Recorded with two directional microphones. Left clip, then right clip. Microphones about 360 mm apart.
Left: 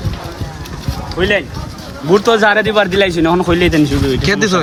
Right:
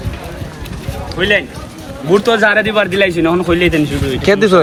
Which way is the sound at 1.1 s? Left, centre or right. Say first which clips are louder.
Right 1 dB; left.